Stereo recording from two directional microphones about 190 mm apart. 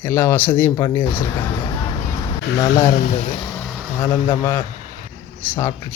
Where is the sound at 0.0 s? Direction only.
10° left (ahead or behind).